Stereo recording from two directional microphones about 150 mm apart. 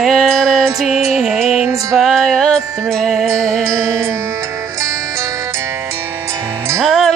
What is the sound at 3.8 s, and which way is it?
Music, 20° right (ahead or behind).